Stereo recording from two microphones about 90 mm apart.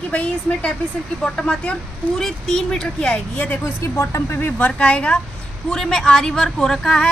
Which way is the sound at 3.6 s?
30° left (ahead or behind).